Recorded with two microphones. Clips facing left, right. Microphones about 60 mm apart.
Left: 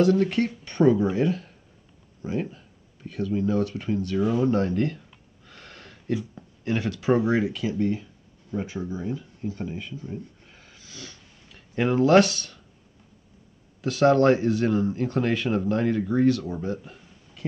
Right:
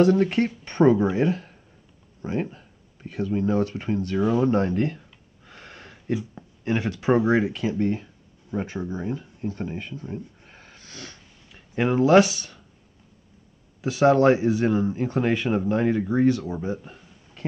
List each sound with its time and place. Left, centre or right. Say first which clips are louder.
0.0 s speech: right 2 dB; right
5.5 s a sound: right 2 dB; centre
8.8 s speech: right 1 dB; right
10.1 s snort: right 2 dB; right
11.5 s speech: right 1 dB; centre
13.7 s speech: right 1 dB; centre
17.4 s a sound: right 1 dB; right